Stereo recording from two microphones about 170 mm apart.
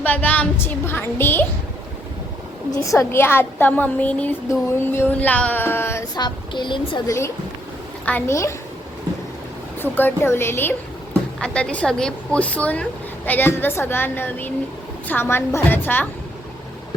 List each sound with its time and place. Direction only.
0.0 s a woman's voice: 10° left (ahead or behind)
2.8 s a woman's voice: 20° left (ahead or behind)
6.1 s a woman's voice: 25° left (ahead or behind)
8.0 s a woman's voice: 15° left (ahead or behind)
9.8 s a woman's voice: 10° left (ahead or behind)